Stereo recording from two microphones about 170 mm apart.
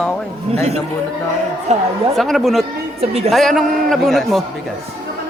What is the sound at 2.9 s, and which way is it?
Speech, 35° right (ahead or behind).